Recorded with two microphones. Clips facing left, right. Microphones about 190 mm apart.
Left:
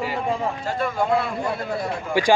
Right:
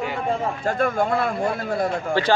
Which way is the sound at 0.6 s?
50° right (ahead or behind).